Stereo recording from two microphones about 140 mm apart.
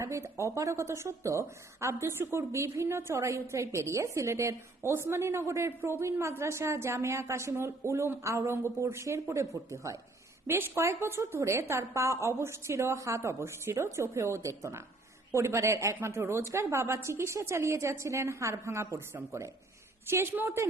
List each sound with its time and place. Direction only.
0.0 s a woman's voice: 20° right (ahead or behind)